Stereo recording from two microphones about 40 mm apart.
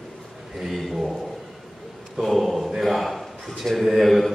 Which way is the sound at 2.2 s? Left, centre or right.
Centre.